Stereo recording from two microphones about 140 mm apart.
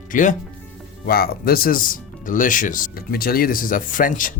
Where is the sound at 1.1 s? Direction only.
90° left.